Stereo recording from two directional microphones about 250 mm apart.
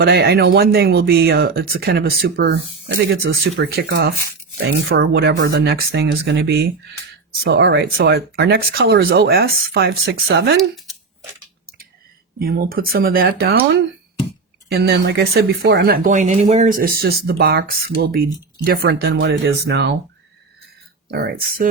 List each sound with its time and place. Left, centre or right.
0.0 s speech: right
3.6 s speech: right
10.6 s speech: centre
12.4 s speech: right
14.7 s speech: right
21.1 s speech: right